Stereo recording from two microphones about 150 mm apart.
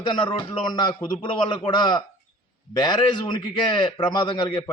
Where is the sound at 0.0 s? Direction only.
30° left (ahead or behind).